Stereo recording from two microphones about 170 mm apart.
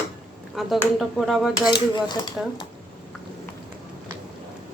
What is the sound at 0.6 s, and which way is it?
Speech, centre (ahead or behind).